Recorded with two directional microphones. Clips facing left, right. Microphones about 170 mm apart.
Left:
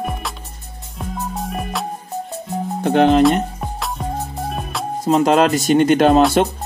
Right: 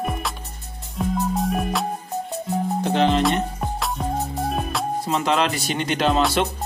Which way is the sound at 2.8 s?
55° left (ahead or behind).